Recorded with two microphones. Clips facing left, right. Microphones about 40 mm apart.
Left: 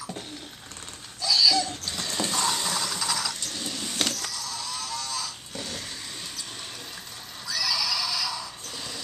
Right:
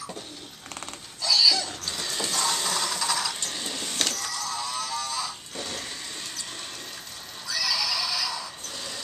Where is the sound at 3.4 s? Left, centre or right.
Centre.